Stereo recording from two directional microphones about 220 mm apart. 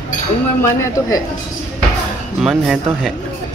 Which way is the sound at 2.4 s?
Centre (ahead or behind).